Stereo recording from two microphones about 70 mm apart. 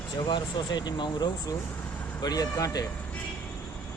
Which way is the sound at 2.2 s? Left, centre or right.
Left.